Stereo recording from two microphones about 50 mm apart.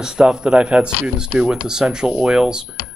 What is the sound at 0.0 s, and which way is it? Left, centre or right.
Speech, centre.